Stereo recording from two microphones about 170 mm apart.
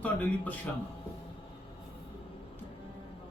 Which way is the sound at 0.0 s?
10° left (ahead or behind).